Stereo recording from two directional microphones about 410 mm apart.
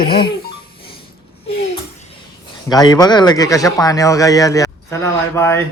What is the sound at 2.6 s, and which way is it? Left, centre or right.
A man's voice, centre.